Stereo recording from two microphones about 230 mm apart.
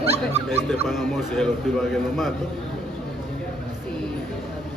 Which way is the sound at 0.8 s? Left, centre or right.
Centre.